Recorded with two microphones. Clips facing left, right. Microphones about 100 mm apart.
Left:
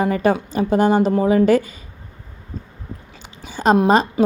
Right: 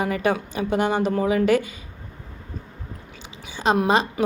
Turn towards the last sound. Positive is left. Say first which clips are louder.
# left 6 dB
turn(degrees=25)  # may be behind; listen again after turning